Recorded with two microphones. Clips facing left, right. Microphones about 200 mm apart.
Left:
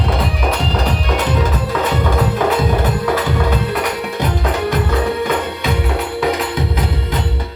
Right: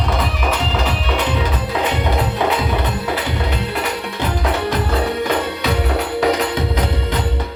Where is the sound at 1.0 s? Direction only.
45° left (ahead or behind).